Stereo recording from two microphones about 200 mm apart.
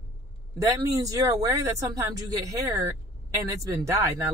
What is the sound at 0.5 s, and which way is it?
Speech, 15° right (ahead or behind).